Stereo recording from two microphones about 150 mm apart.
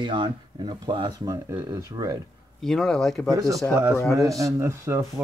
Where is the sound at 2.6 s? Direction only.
5° left (ahead or behind).